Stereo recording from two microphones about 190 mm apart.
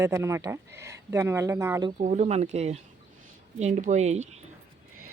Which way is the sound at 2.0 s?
35° right (ahead or behind).